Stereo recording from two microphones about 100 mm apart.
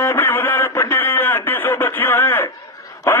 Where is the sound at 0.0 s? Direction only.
20° left (ahead or behind).